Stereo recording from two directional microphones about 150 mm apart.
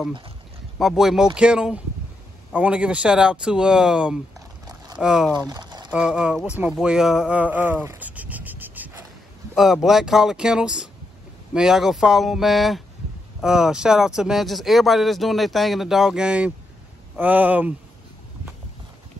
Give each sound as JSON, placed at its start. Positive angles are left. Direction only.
{"t": 0.7, "sound": "speech", "side_deg": 0}
{"t": 5.5, "sound": "a sound", "side_deg": -30}
{"t": 5.9, "sound": "speech", "side_deg": -5}